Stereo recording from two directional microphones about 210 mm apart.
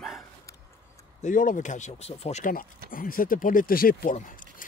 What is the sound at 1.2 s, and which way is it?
Speech, 40° left (ahead or behind).